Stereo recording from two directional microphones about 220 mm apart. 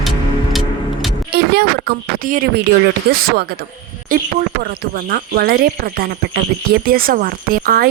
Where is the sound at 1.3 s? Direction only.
50° right (ahead or behind).